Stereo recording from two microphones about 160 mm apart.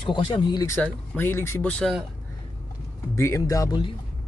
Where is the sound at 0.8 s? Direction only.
15° left (ahead or behind).